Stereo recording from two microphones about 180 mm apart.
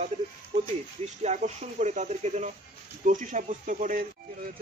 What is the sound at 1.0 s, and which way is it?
Speech, 40° right (ahead or behind).